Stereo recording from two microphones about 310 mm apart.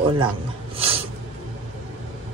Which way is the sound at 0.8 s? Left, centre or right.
Centre.